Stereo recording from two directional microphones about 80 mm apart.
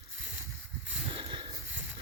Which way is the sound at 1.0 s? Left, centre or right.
Right.